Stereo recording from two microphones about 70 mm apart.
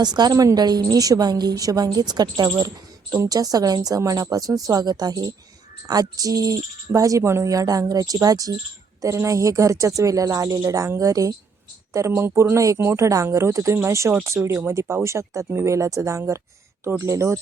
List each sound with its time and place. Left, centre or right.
0.0 s a woman's voice: right
2.6 s speech: right
9.0 s speech: right
11.9 s speech: right